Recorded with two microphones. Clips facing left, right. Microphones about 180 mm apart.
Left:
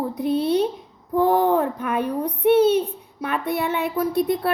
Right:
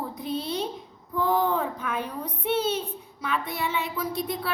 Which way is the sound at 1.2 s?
60° left (ahead or behind).